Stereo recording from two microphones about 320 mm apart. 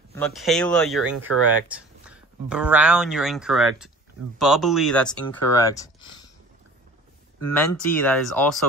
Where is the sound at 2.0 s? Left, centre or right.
Centre.